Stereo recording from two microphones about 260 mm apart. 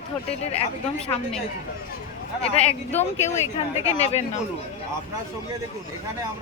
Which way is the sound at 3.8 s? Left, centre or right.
Left.